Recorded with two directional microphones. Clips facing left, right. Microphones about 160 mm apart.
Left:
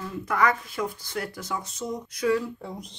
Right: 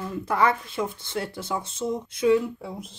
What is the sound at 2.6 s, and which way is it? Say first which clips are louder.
Speech: right 1 dB; 5° right (ahead or behind).